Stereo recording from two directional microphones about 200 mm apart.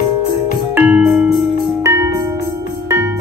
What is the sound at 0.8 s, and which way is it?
Music, 10° right (ahead or behind).